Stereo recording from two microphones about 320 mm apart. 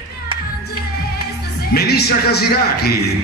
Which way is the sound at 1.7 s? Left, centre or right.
Left.